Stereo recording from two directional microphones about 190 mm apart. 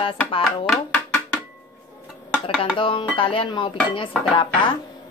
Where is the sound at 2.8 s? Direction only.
25° left (ahead or behind).